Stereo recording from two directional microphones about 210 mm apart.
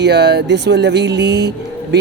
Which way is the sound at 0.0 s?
55° right (ahead or behind).